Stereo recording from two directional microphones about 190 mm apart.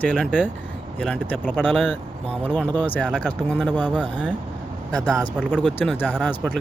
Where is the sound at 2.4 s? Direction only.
10° left (ahead or behind).